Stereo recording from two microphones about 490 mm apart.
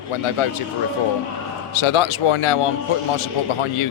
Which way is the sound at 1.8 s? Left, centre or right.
Left.